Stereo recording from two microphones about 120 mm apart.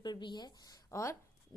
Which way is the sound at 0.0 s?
40° left (ahead or behind).